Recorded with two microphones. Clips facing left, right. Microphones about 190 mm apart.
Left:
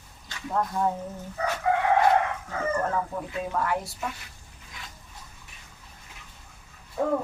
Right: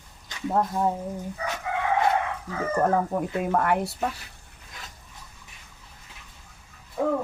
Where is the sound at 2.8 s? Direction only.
55° right (ahead or behind).